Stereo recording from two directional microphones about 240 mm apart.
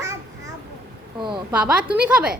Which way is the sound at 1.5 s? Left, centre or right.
Centre.